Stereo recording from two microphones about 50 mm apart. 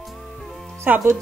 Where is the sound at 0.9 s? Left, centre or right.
Right.